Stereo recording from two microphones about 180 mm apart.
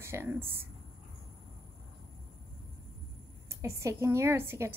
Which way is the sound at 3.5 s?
15° right (ahead or behind).